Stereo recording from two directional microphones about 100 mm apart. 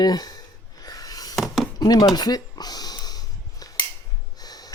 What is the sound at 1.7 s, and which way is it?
Chopping, 40° left (ahead or behind).